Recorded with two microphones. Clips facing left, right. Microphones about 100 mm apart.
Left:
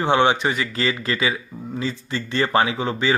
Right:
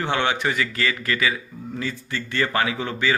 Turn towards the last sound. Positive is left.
turn(degrees=20)  # may be behind; listen again after turning